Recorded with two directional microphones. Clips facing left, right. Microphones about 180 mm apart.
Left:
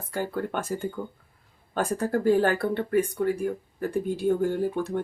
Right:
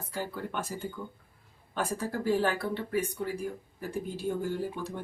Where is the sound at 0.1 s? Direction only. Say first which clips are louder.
Left 7 dB; 50° left (ahead or behind).